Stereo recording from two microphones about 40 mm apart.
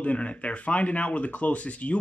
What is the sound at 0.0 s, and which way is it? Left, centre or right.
Speech, left.